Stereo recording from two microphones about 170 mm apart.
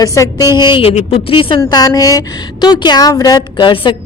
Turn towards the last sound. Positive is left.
turn(degrees=30)  # may be behind; listen again after turning